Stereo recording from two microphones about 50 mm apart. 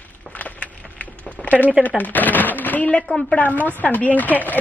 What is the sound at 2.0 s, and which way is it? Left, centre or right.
Speech, left.